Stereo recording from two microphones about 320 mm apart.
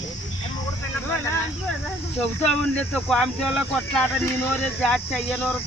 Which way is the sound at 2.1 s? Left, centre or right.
Centre.